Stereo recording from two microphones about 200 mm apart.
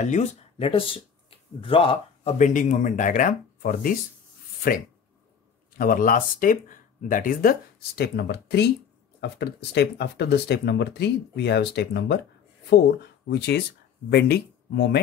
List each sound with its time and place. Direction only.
0.0 s speech: 35° left (ahead or behind)
5.7 s speech: 45° left (ahead or behind)